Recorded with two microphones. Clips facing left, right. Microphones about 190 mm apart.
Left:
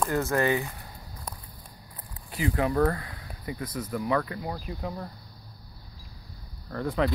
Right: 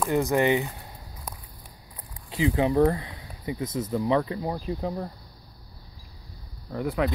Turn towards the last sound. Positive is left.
turn(degrees=-5)  # may be behind; listen again after turning